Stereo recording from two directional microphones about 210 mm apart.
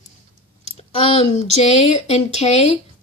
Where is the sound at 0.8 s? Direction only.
30° left (ahead or behind).